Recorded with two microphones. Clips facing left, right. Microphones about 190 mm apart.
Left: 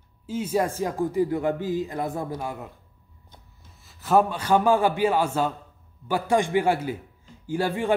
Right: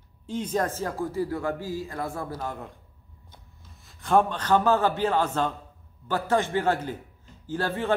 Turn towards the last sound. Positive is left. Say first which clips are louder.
# left 3 dB
turn(degrees=15)  # may be behind; listen again after turning